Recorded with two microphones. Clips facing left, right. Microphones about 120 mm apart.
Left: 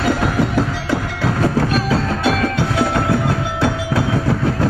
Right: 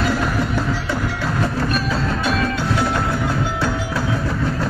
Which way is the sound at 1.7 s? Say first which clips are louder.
Left 3 dB; 65° left (ahead or behind).